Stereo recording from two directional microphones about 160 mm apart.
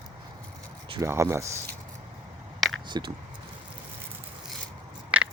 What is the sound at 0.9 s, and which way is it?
Speech, 15° right (ahead or behind).